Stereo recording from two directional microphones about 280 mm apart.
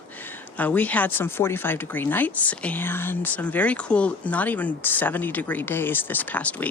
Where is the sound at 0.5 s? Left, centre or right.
Centre.